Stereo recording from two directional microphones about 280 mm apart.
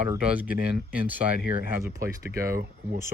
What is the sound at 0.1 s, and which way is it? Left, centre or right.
Speech, centre.